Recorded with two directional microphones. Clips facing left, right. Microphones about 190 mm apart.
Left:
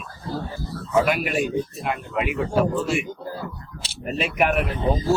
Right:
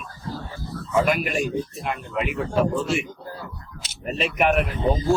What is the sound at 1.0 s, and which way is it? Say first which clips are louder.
Speech: even; 5° left (ahead or behind).